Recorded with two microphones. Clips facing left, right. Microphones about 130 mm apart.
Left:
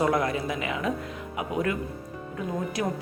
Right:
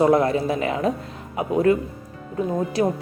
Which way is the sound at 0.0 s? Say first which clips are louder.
Right 7 dB; 30° right (ahead or behind).